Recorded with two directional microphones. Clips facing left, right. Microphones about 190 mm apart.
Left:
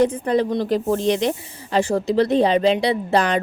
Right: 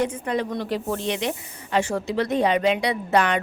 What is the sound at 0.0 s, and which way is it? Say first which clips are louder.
A woman's voice: left 6 dB; 35° left (ahead or behind).